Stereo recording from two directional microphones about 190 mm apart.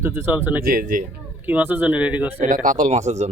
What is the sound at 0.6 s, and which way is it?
Speech, 50° right (ahead or behind).